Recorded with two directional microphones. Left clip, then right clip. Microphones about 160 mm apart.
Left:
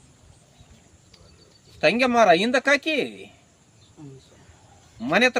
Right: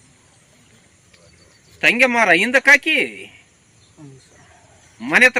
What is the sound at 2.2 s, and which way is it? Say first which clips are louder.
Speech: right 3 dB; 20° left (ahead or behind).